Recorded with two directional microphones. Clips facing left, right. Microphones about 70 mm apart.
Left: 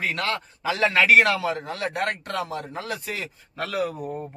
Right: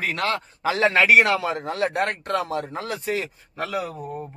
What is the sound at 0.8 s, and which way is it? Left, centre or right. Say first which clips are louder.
A man's voice: right 1 dB; right.